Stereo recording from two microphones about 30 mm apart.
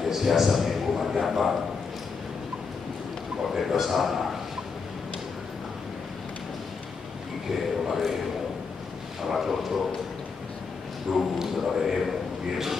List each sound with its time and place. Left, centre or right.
0.0 s a sound: centre
1.2 s a man's voice: centre
3.5 s a man's voice: centre
7.9 s a man's voice: centre
9.3 s a man's voice: centre
11.1 s a man's voice: centre